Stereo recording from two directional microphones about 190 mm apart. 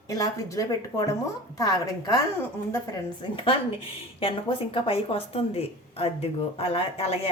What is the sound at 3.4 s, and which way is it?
A woman's voice, 30° left (ahead or behind).